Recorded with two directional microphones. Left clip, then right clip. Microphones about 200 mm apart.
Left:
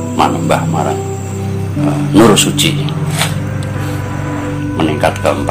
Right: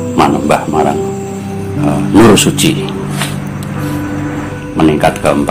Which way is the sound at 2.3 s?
20° right (ahead or behind).